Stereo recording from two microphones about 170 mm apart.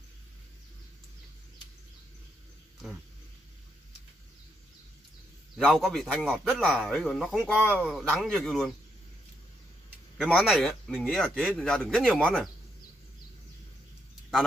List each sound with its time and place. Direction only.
5.6 s a man's voice: centre (ahead or behind)
10.3 s a man's voice: centre (ahead or behind)